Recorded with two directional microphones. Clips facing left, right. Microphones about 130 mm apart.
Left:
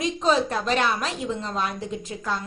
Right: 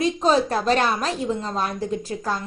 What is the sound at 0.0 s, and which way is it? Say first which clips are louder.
A woman's voice: right 3 dB; 35° right (ahead or behind).